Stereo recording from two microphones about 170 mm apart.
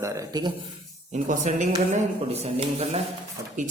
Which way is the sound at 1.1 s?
45° right (ahead or behind).